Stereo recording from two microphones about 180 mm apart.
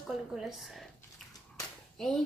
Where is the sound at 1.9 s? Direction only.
5° left (ahead or behind).